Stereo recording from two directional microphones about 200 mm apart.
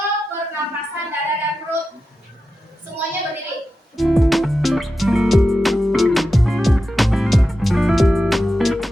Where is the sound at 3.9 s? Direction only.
Centre (ahead or behind).